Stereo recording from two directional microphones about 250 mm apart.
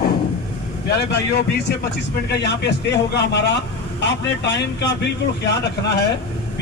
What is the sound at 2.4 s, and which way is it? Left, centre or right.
A man's voice, left.